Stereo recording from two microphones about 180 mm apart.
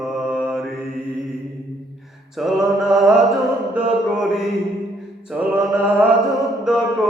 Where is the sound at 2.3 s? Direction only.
Centre (ahead or behind).